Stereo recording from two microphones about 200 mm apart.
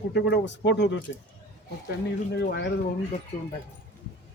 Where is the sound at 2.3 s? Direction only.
60° left (ahead or behind).